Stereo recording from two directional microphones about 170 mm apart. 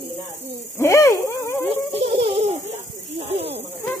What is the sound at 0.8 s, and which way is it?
Speech, 15° left (ahead or behind).